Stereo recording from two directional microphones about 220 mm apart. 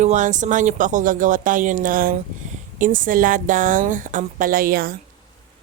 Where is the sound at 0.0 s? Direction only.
35° right (ahead or behind).